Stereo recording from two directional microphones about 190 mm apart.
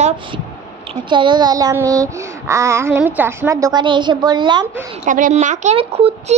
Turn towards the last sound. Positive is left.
turn(degrees=-30)  # may be behind; listen again after turning